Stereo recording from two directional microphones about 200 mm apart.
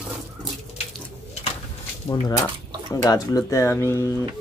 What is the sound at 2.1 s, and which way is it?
Speech, 20° left (ahead or behind).